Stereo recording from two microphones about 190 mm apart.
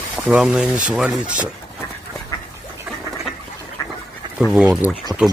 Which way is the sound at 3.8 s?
15° left (ahead or behind).